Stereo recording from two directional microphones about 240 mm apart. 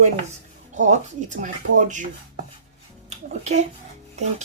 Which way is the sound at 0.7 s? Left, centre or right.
Right.